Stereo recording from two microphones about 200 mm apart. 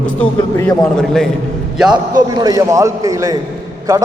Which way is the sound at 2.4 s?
15° right (ahead or behind).